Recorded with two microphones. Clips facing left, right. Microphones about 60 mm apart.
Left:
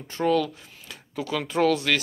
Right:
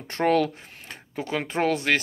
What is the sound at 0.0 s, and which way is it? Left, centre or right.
Speech, right.